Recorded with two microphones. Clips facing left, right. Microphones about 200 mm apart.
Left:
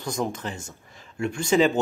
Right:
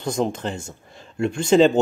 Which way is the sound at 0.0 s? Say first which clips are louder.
Right 5 dB; 25° right (ahead or behind).